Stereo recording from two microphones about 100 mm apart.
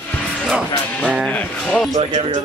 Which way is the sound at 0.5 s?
10° right (ahead or behind).